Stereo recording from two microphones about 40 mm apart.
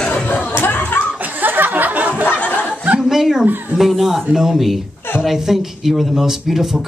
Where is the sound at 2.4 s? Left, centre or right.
Left.